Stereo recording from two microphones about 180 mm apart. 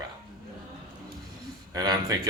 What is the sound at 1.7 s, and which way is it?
Speech, 20° right (ahead or behind).